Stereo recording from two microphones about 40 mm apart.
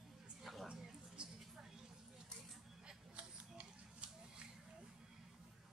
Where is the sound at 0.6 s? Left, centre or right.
Centre.